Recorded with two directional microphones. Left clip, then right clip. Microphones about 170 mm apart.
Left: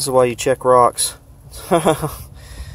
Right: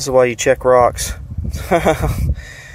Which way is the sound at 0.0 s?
5° left (ahead or behind).